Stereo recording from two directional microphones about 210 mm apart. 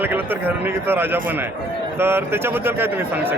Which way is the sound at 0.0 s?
10° right (ahead or behind).